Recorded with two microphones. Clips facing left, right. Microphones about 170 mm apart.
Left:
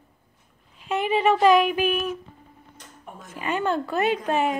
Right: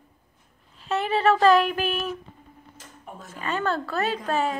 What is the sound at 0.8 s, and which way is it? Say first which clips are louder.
Speech: left 1 dB; 15° left (ahead or behind).